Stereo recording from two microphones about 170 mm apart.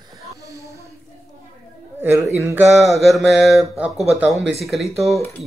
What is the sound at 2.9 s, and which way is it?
Speech, centre (ahead or behind).